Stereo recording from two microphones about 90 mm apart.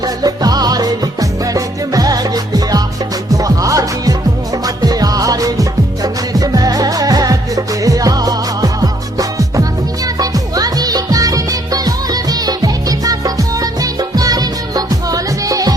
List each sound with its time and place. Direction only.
0.0 s music: 45° right (ahead or behind)